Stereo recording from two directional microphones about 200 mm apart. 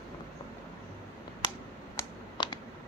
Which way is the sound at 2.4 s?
25° left (ahead or behind).